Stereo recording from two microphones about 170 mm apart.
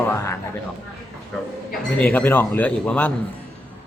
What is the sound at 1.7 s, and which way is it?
Cutlery, 10° left (ahead or behind).